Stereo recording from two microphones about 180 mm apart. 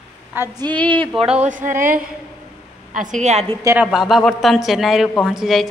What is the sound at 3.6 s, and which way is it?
Speech, 15° right (ahead or behind).